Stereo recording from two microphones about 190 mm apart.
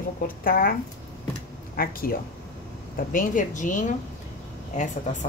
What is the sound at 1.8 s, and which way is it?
Speech, 50° left (ahead or behind).